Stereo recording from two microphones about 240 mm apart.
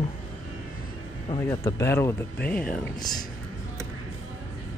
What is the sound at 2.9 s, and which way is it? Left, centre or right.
Speech, centre.